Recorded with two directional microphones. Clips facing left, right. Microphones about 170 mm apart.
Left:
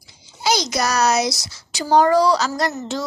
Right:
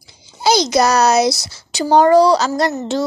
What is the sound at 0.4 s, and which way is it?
Speech, 30° right (ahead or behind).